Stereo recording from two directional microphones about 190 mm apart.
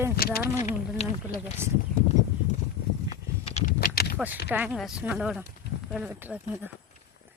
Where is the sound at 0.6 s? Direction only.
35° left (ahead or behind).